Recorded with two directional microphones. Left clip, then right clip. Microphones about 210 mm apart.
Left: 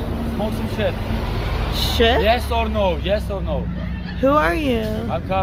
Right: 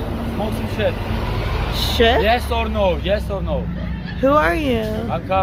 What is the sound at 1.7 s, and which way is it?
Speech, centre (ahead or behind).